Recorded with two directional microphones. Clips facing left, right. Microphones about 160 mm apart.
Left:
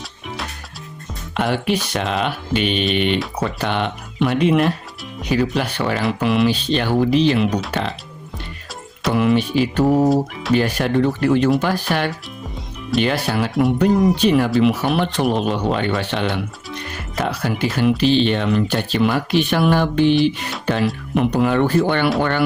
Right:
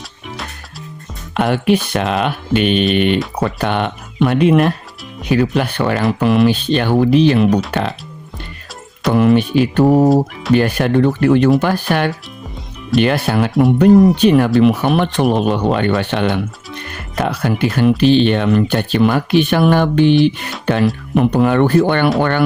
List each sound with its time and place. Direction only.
1.3 s speech: 55° right (ahead or behind)
9.1 s speech: 50° right (ahead or behind)